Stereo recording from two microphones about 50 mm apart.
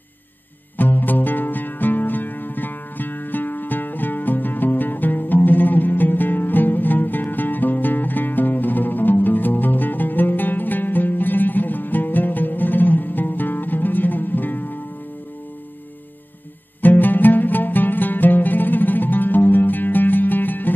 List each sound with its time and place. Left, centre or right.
0.7 s music: left
16.8 s music: left